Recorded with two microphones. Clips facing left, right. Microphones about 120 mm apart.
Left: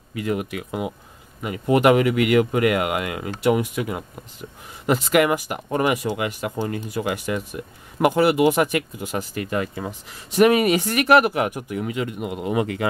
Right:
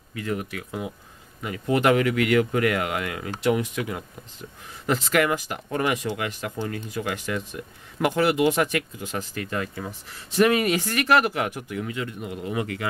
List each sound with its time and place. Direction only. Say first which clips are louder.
0.1 s speech: left 4 dB; 15° left (ahead or behind)
12.2 s speech: left 5 dB; 70° left (ahead or behind)
12.4 s speech: left 6 dB; 20° left (ahead or behind)